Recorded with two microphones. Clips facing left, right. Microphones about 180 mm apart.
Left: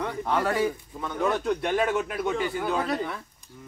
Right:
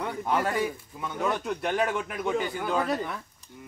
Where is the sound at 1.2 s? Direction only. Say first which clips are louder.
Left 3 dB; centre (ahead or behind).